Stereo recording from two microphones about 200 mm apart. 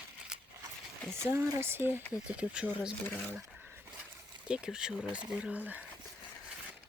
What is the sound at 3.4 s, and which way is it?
Dog, 10° right (ahead or behind).